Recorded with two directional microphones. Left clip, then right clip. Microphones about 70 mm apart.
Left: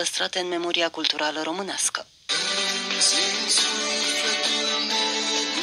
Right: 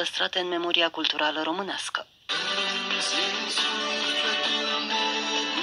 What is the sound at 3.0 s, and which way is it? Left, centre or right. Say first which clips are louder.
Music: left 7 dB; left.